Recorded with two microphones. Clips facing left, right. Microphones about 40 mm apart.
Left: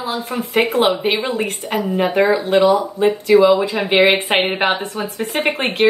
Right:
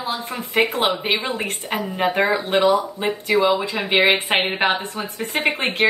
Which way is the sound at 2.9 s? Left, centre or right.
Right.